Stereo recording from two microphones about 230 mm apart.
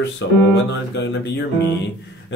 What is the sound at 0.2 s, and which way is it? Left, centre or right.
Speech, left.